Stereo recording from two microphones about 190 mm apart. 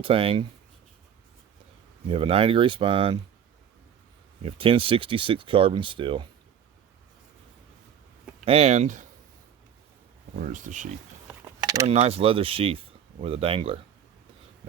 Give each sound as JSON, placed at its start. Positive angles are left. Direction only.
{"t": 0.0, "sound": "speech", "side_deg": -30}
{"t": 2.0, "sound": "speech", "side_deg": -30}
{"t": 4.4, "sound": "speech", "side_deg": -30}
{"t": 8.4, "sound": "speech", "side_deg": -35}
{"t": 10.3, "sound": "speech", "side_deg": -45}
{"t": 11.4, "sound": "a sound", "side_deg": -15}
{"t": 11.9, "sound": "speech", "side_deg": -30}